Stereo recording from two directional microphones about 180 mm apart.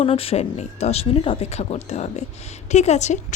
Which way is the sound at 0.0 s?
30° left (ahead or behind).